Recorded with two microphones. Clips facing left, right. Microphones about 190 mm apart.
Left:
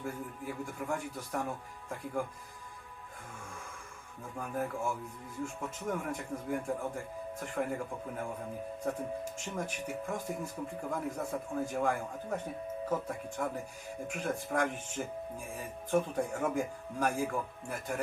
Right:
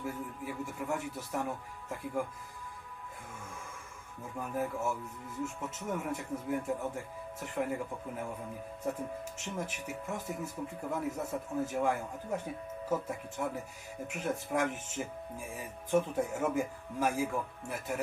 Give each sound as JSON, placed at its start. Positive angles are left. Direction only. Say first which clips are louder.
{"t": 0.0, "sound": "a man's voice", "louder": "right 1 dB", "side_deg": -5}
{"t": 4.4, "sound": "a man's voice", "louder": "right 1 dB", "side_deg": -5}
{"t": 9.6, "sound": "a man's voice", "louder": "left 2 dB", "side_deg": -5}